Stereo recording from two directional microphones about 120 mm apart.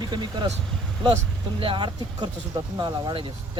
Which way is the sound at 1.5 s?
45° right (ahead or behind).